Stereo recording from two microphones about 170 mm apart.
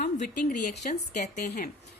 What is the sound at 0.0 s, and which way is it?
Speech, 55° left (ahead or behind).